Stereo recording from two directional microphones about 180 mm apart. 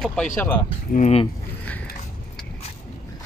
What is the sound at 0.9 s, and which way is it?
Speech, 35° left (ahead or behind).